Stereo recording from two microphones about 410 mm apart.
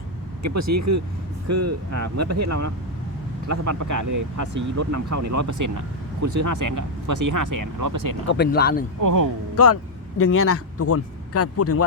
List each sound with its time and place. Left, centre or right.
0.4 s speech: right
8.3 s speech: left
9.0 s speech: right
9.6 s a man's voice: left